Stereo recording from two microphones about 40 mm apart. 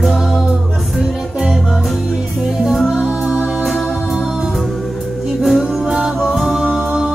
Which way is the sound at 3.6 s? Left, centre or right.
Centre.